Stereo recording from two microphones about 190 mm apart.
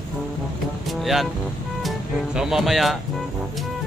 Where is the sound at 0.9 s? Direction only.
Centre (ahead or behind).